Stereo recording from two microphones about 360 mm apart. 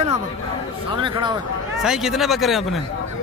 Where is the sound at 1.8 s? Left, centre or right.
Centre.